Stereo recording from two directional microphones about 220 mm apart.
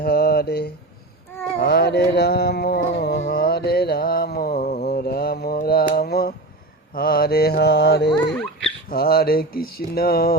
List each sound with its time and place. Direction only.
0.0 s mantra: 45° left (ahead or behind)
4.8 s mantra: 45° left (ahead or behind)
6.9 s a sound: 45° left (ahead or behind)